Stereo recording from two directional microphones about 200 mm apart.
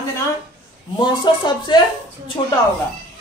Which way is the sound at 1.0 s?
25° left (ahead or behind).